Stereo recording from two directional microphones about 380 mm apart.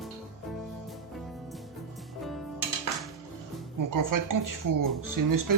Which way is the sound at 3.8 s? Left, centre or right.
Right.